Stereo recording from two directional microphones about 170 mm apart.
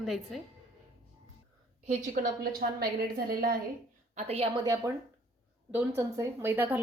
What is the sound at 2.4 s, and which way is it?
A woman's voice, 60° right (ahead or behind).